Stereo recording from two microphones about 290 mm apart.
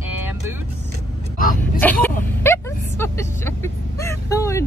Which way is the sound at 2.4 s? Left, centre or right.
Centre.